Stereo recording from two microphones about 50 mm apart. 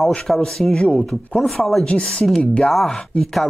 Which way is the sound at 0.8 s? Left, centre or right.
Left.